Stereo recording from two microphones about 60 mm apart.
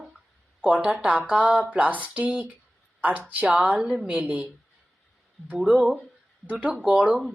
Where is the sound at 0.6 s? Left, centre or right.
Right.